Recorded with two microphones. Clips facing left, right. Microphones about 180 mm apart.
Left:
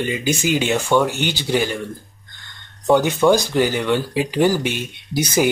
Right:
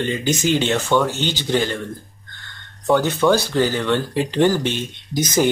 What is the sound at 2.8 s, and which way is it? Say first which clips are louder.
Speech: left 2 dB; 15° left (ahead or behind).